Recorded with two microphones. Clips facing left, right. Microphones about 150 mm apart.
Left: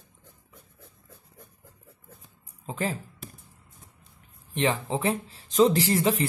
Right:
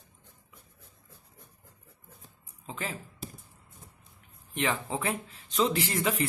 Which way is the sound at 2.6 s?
35° left (ahead or behind).